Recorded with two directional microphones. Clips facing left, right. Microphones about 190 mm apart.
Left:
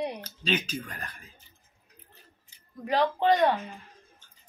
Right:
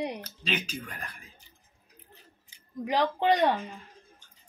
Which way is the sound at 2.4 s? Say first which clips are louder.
Right 2 dB; 15° right (ahead or behind).